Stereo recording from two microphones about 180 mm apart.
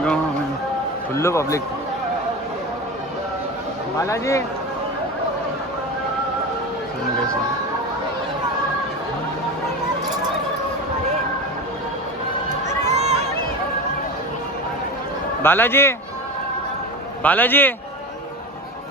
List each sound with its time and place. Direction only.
1.1 s a man's voice: 15° left (ahead or behind)
4.0 s a man's voice: 15° left (ahead or behind)
12.8 s a sound: 40° right (ahead or behind)
15.4 s a man's voice: 10° left (ahead or behind)
17.2 s a man's voice: 10° left (ahead or behind)